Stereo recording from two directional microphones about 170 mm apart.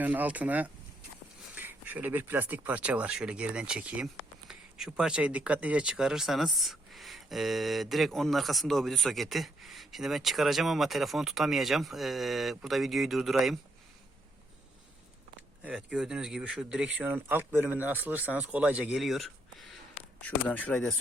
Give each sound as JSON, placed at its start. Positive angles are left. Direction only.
{"t": 0.0, "sound": "speech", "side_deg": -10}
{"t": 15.6, "sound": "speech", "side_deg": -5}